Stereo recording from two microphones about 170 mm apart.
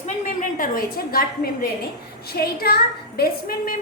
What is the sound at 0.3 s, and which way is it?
Speech, 55° left (ahead or behind).